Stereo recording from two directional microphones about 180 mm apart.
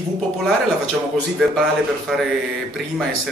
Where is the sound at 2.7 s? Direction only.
Centre (ahead or behind).